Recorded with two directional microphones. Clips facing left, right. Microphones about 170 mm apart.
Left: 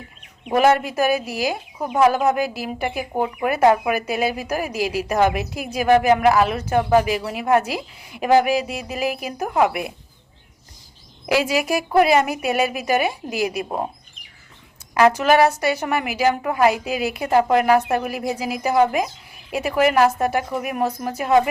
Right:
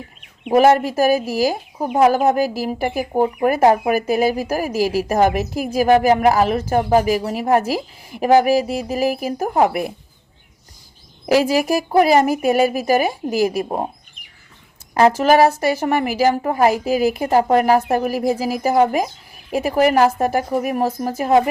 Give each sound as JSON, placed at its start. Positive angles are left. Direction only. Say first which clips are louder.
{"t": 0.5, "sound": "speech", "louder": "right 4 dB", "side_deg": -40}
{"t": 11.3, "sound": "speech", "louder": "right 4 dB", "side_deg": -40}
{"t": 15.2, "sound": "speech", "louder": "right 3 dB", "side_deg": -40}